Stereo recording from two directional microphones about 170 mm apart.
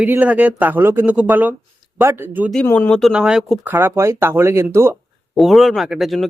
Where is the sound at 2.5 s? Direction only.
5° left (ahead or behind).